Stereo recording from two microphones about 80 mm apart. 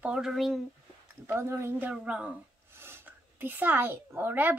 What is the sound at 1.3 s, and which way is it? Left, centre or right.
Speech, right.